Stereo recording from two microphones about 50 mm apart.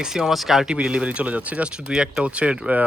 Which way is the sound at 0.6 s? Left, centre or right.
Centre.